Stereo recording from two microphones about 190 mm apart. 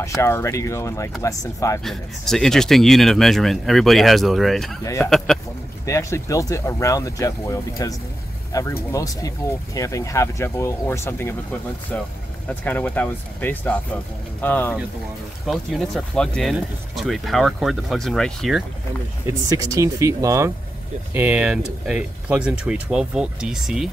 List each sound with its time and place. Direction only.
0.0 s speech: 15° left (ahead or behind)
1.9 s speech: centre (ahead or behind)
4.8 s speech: 15° left (ahead or behind)
5.1 s speech: centre (ahead or behind)
5.9 s speech: 15° left (ahead or behind)
12.4 s speech: 10° left (ahead or behind)
19.2 s speech: 15° right (ahead or behind)